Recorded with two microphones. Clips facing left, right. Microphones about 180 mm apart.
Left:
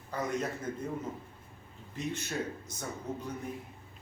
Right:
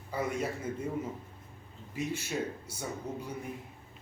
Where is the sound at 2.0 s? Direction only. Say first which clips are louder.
Right 2 dB; 10° right (ahead or behind).